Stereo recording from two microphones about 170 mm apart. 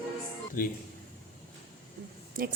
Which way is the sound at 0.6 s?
55° left (ahead or behind).